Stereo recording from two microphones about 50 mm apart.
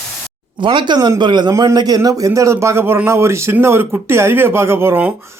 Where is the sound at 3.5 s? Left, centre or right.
Right.